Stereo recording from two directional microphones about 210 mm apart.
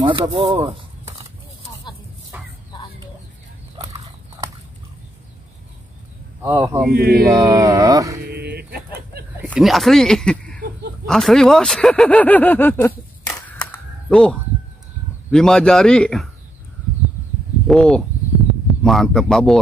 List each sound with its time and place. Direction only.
0.0 s speech: 25° right (ahead or behind)
2.3 s chicken: 10° right (ahead or behind)
6.4 s speech: 15° right (ahead or behind)
6.9 s speech: 45° right (ahead or behind)
7.3 s speech: 15° right (ahead or behind)
8.5 s bird: 50° right (ahead or behind)
9.4 s speech: 5° right (ahead or behind)
13.3 s single-lens reflex camera: 5° left (ahead or behind)
15.3 s speech: 5° left (ahead or behind)
17.6 s speech: centre (ahead or behind)